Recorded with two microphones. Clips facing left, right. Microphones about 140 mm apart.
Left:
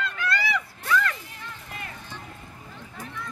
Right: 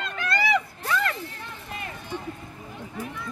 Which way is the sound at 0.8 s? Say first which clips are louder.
Left 1 dB; 45° right (ahead or behind).